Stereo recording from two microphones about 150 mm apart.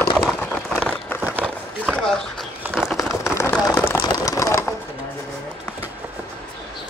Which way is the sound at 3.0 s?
20° left (ahead or behind).